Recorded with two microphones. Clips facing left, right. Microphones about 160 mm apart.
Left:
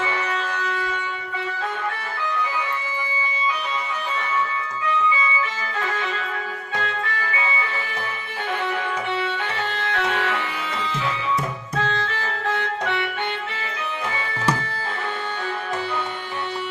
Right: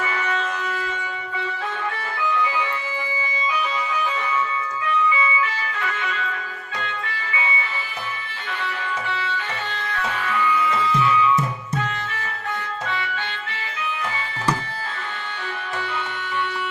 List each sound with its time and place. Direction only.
5.8 s music: 35° left (ahead or behind)
9.7 s music: 75° left (ahead or behind)